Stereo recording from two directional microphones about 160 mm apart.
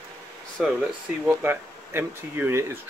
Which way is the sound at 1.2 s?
15° right (ahead or behind).